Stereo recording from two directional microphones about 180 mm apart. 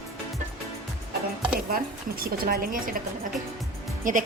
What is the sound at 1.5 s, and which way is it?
A woman's voice, 55° right (ahead or behind).